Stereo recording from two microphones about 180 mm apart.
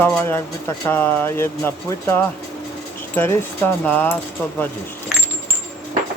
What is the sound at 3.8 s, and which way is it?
Speech, 10° left (ahead or behind).